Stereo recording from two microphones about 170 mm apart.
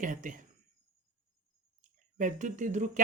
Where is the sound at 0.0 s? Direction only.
50° right (ahead or behind).